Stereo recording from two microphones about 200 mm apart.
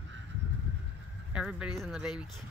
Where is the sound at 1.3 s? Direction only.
5° right (ahead or behind).